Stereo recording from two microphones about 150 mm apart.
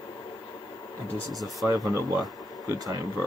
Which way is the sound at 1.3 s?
Centre (ahead or behind).